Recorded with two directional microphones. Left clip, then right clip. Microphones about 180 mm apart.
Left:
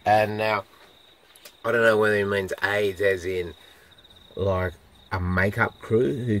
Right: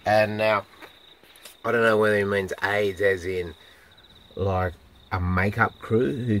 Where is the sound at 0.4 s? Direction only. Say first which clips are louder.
Right 2 dB; 15° left (ahead or behind).